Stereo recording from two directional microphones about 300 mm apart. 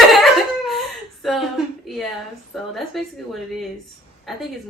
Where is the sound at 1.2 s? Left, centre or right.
Centre.